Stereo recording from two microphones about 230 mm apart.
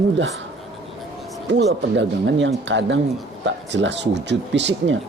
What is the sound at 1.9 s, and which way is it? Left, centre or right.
Speech, right.